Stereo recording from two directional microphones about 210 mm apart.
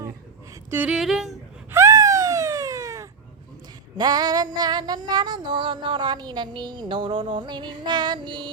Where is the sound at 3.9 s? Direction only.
20° right (ahead or behind).